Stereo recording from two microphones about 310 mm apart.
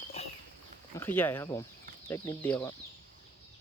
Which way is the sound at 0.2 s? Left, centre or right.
Centre.